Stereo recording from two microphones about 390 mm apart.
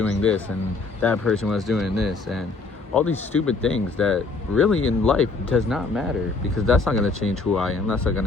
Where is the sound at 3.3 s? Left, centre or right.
Left.